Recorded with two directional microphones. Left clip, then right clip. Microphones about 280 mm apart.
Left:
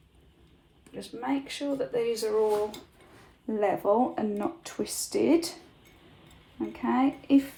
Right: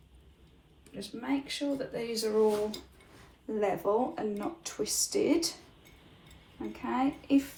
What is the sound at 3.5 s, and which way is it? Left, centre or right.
Speech, left.